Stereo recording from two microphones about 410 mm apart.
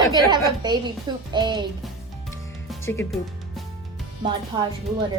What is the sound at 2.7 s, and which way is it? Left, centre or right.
Music, centre.